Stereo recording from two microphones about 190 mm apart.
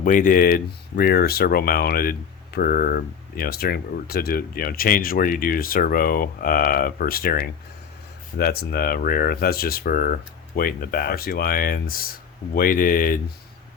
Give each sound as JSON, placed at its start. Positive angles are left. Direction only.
{"t": 0.0, "sound": "speech", "side_deg": 45}